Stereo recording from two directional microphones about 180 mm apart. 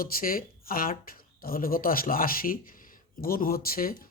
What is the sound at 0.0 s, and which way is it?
Speech, 55° left (ahead or behind).